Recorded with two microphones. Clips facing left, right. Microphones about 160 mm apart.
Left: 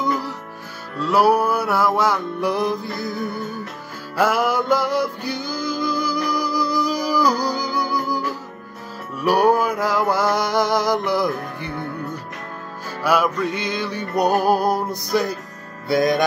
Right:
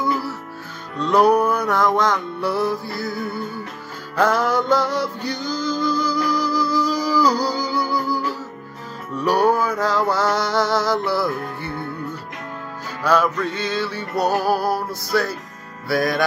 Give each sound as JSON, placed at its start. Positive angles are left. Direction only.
{"t": 0.0, "sound": "music", "side_deg": 20}
{"t": 0.9, "sound": "male singing", "side_deg": 5}
{"t": 4.2, "sound": "music", "side_deg": 10}
{"t": 9.1, "sound": "male singing", "side_deg": 10}
{"t": 13.0, "sound": "male singing", "side_deg": 10}
{"t": 15.9, "sound": "music", "side_deg": 20}